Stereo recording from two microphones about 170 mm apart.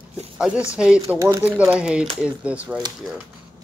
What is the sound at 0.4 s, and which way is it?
Speech, 5° right (ahead or behind).